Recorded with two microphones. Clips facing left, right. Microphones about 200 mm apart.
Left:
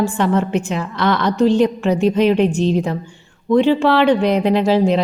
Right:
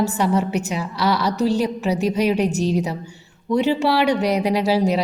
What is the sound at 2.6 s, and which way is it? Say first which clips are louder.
Speech: left 3 dB; 10° right (ahead or behind).